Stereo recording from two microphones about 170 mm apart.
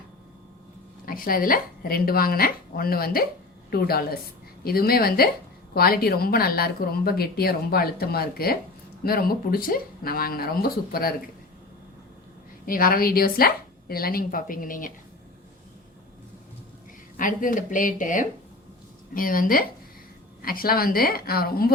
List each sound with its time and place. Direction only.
1.0 s a woman's voice: 55° left (ahead or behind)
12.6 s a woman's voice: 55° left (ahead or behind)
17.2 s a woman's voice: 50° left (ahead or behind)